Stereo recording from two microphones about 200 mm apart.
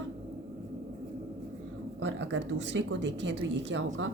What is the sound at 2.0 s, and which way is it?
A woman's voice, 65° right (ahead or behind).